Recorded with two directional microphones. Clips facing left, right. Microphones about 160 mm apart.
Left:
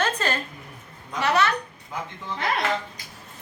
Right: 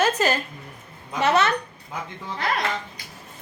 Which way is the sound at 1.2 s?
20° right (ahead or behind).